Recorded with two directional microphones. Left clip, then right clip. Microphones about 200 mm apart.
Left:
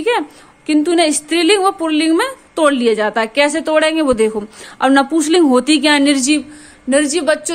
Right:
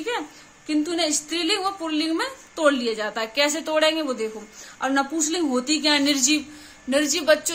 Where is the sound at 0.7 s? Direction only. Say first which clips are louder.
Left 10 dB; 40° left (ahead or behind).